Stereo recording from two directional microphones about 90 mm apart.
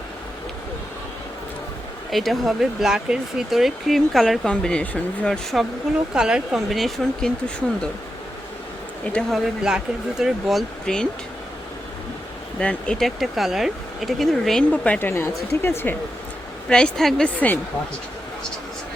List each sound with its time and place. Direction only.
2.0 s speech: centre (ahead or behind)
6.1 s speech: 10° right (ahead or behind)
9.3 s speech: 5° right (ahead or behind)
12.5 s speech: 10° left (ahead or behind)
14.8 s speech: 20° left (ahead or behind)
16.6 s speech: 10° left (ahead or behind)
17.2 s speech: 15° left (ahead or behind)